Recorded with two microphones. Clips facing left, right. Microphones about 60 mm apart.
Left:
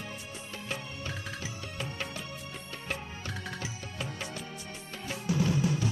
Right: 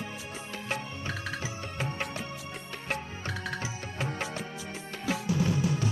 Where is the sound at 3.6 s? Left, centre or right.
Right.